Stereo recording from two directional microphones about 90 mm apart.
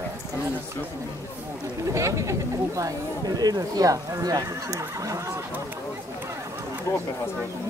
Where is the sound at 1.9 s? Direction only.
35° right (ahead or behind).